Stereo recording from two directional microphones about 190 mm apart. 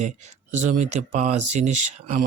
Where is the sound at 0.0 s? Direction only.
40° right (ahead or behind).